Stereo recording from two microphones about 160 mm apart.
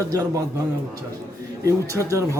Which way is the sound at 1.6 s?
20° right (ahead or behind).